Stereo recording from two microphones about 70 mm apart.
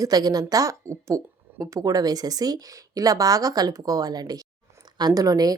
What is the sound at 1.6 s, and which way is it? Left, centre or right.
Speech, right.